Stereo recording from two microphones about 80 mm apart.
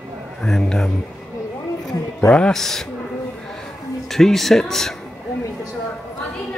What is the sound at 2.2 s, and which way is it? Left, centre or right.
Speech, centre.